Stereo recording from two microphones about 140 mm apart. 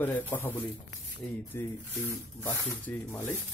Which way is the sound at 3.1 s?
15° left (ahead or behind).